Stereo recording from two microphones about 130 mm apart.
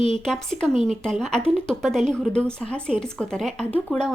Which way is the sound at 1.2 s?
5° left (ahead or behind).